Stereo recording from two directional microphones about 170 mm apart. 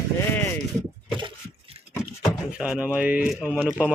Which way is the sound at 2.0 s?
5° right (ahead or behind).